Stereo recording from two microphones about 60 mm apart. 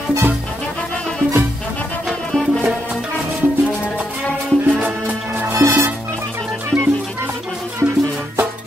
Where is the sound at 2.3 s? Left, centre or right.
Centre.